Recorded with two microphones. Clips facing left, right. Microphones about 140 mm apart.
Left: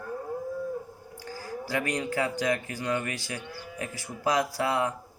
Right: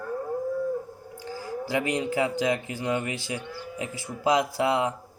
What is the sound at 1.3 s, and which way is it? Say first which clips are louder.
Speech: right 3 dB; 20° right (ahead or behind).